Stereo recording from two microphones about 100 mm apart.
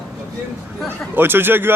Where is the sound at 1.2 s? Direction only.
20° right (ahead or behind).